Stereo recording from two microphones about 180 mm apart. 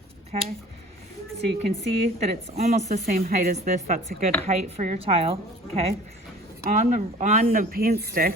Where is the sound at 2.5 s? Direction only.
40° right (ahead or behind).